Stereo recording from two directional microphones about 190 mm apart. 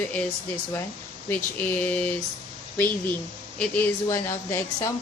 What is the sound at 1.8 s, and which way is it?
Speech, 10° left (ahead or behind).